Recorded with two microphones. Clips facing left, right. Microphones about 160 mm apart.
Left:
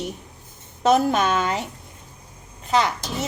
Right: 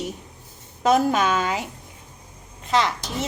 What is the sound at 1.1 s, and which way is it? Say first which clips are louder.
Speech: even; 10° right (ahead or behind).